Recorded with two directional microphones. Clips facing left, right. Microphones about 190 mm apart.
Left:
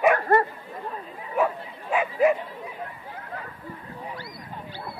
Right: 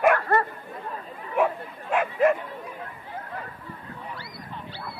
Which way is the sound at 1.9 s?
5° left (ahead or behind).